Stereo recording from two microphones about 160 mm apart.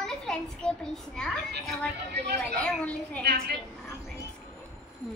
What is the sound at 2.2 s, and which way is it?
Speech, 90° right.